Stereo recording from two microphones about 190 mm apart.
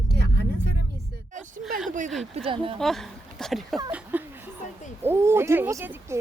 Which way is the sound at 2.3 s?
30° right (ahead or behind).